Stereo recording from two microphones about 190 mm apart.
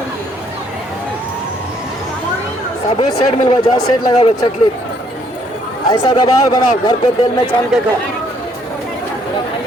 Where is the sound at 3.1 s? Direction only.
25° left (ahead or behind).